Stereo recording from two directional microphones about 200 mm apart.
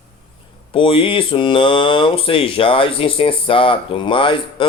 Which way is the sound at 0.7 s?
25° left (ahead or behind).